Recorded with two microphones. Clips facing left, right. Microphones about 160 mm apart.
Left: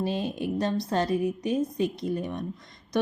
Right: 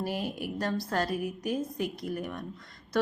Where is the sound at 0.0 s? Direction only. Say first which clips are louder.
Left 4 dB; 25° left (ahead or behind).